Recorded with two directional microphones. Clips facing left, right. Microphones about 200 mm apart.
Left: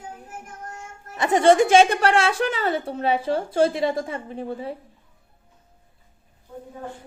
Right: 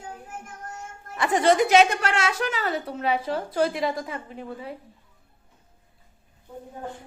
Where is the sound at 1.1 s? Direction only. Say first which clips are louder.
Left 4 dB; 25° left (ahead or behind).